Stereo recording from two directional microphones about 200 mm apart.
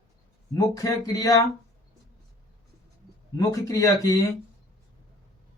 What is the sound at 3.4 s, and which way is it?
Speech, 15° left (ahead or behind).